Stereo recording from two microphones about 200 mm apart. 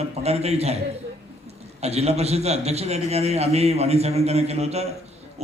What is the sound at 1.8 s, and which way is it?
A man's voice, 30° right (ahead or behind).